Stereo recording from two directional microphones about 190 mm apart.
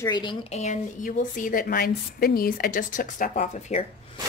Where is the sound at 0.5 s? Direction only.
35° left (ahead or behind).